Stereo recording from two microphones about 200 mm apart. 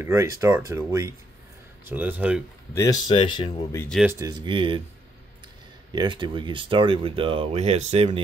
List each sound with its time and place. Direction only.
0.0 s speech: 15° right (ahead or behind)
2.7 s speech: 15° left (ahead or behind)
3.9 s speech: 5° right (ahead or behind)
4.2 s speech: 20° right (ahead or behind)
5.9 s speech: 25° right (ahead or behind)